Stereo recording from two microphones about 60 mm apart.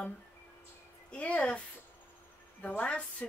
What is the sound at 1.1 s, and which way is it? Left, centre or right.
Speech, left.